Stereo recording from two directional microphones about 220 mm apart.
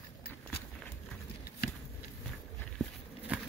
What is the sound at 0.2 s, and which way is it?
Walk, 45° left (ahead or behind).